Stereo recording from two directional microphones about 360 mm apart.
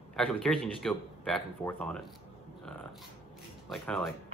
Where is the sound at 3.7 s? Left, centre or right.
Centre.